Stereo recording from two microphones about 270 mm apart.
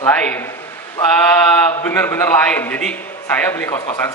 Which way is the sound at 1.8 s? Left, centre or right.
Centre.